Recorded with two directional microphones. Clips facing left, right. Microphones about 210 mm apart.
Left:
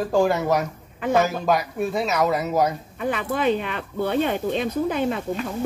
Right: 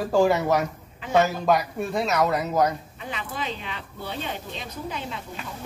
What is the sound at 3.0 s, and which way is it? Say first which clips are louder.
Speech: left 9 dB; 55° left (ahead or behind).